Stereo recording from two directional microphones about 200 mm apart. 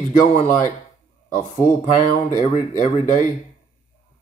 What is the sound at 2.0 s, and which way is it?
Speech, 40° left (ahead or behind).